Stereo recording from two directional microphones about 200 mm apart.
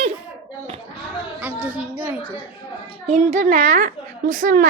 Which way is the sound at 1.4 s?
5° right (ahead or behind).